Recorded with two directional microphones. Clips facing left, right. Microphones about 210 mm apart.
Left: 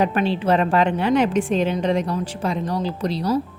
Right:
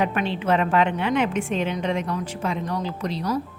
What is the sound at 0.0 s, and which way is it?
A woman's voice, 35° left (ahead or behind).